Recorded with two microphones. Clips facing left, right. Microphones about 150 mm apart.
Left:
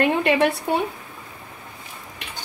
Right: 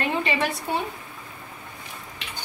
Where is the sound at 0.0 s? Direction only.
60° left (ahead or behind).